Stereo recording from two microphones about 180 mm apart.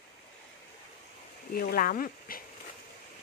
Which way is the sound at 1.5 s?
55° left (ahead or behind).